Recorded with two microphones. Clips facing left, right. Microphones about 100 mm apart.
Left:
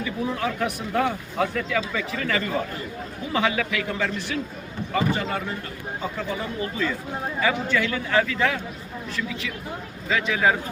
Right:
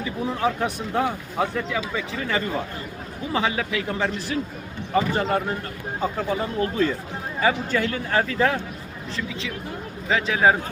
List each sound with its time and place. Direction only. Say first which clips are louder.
0.0 s a man's voice: right 2 dB; 25° right (ahead or behind)
6.6 s a man's voice: right 4 dB; 50° right (ahead or behind)
10.1 s speech: right 2 dB; 25° right (ahead or behind)